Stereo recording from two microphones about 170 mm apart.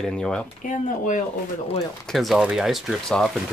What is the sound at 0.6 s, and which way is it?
Speech, 50° left (ahead or behind).